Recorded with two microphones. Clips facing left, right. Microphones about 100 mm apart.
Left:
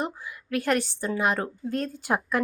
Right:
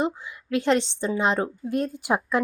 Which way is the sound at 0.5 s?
20° right (ahead or behind).